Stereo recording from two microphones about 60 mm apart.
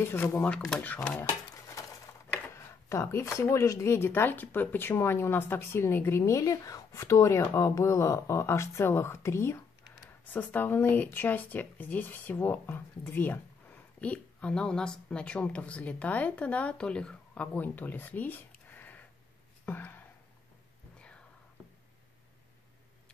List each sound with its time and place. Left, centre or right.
0.0 s speech: left
2.5 s a sound: left
3.3 s speech: left
6.2 s speech: left
10.3 s speech: left
14.0 s a woman's voice: centre
17.6 s speech: left
19.6 s a sound: left